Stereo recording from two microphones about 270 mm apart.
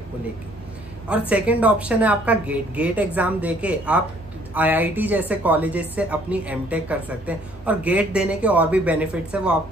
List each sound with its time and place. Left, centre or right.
1.3 s a woman's voice: centre